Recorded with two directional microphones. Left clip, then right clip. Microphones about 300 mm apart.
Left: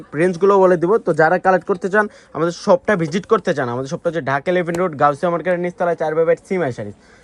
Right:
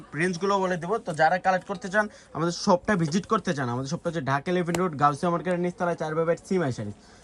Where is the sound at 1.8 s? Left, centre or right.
Centre.